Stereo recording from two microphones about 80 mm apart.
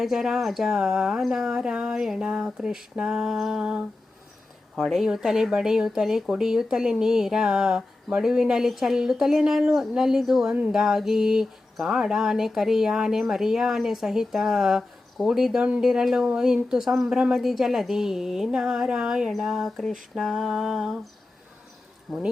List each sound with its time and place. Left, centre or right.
0.0 s speech: centre
10.5 s speech: centre
10.8 s speech: centre
22.1 s speech: centre